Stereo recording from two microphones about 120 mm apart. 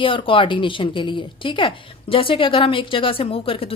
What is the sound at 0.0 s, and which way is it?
Speech, 45° left (ahead or behind).